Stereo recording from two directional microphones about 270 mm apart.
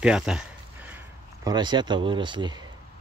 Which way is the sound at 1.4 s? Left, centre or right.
Centre.